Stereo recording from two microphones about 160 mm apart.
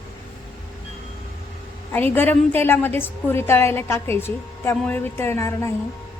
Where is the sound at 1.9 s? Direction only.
10° left (ahead or behind).